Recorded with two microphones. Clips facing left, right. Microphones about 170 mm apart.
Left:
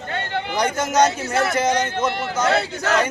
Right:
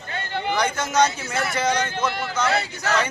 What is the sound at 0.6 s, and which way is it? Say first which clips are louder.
A man's voice: left 4 dB; 45° left (ahead or behind).